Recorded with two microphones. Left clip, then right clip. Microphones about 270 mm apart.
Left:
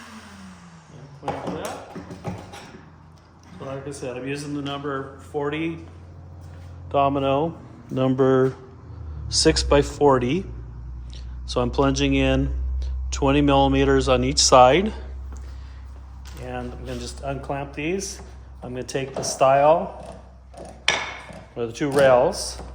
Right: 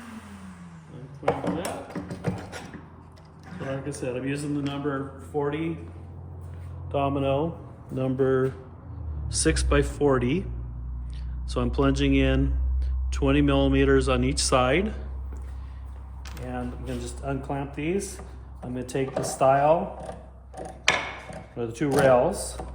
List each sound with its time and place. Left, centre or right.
1.2 s a sound: centre
3.6 s speech: centre
5.4 s speech: left
6.9 s speech: left; by 10.4 s centre
11.4 s speech: centre
16.5 s a sound: left
18.7 s speech: left
21.5 s speech: left